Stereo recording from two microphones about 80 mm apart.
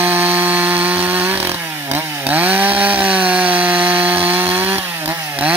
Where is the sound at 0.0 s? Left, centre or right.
Right.